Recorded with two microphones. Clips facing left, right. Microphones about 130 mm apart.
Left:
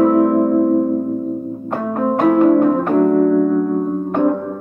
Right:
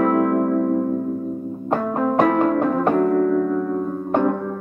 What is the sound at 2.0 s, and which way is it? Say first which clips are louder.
Music: left 5 dB; 25° left (ahead or behind).